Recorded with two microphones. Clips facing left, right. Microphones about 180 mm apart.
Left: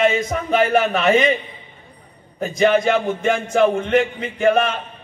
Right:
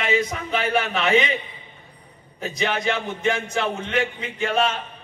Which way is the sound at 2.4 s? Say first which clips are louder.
Left 9 dB; 50° left (ahead or behind).